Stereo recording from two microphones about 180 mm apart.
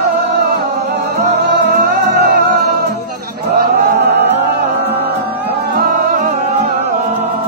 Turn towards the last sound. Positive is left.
turn(degrees=-50)  # may be behind; listen again after turning